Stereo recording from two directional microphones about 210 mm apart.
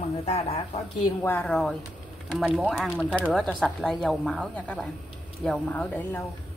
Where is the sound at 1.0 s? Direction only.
10° left (ahead or behind).